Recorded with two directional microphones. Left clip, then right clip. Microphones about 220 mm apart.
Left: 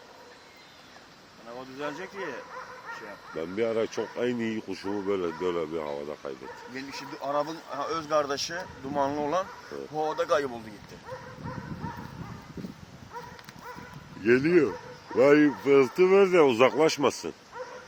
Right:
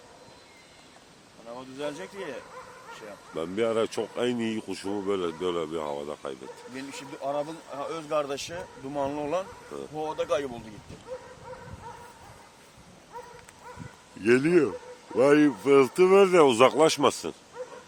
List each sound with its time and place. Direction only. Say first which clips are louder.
1.5 s speech: even; 55° right (ahead or behind)
3.3 s speech: right 2 dB; 25° right (ahead or behind)
7.3 s speech: left 2 dB; 25° right (ahead or behind)
9.9 s speech: left 2 dB; 5° right (ahead or behind)
14.3 s speech: even; 10° right (ahead or behind)